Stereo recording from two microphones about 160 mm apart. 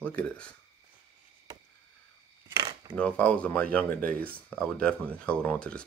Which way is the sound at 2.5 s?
20° right (ahead or behind).